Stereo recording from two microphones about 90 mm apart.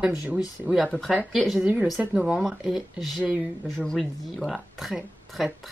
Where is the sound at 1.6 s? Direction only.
20° right (ahead or behind).